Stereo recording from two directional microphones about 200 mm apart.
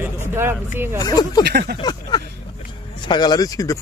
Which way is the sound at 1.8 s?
20° left (ahead or behind).